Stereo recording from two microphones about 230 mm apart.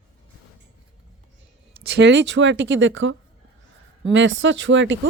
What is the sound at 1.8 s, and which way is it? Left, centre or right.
Speech, right.